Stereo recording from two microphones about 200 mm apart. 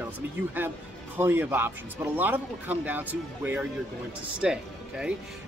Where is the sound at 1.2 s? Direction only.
10° right (ahead or behind).